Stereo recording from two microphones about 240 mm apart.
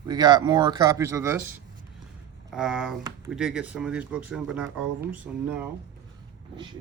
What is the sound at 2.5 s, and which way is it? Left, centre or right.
Speech, centre.